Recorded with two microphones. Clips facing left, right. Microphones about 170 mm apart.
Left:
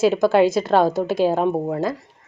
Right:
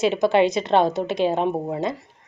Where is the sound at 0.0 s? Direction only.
5° left (ahead or behind).